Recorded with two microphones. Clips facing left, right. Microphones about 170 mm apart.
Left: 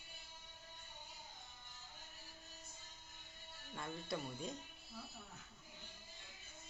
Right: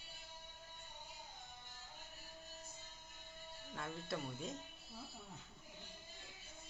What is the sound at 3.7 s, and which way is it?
Speech, centre (ahead or behind).